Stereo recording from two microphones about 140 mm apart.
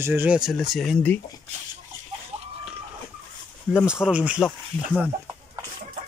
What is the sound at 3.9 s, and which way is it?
Speech, 5° right (ahead or behind).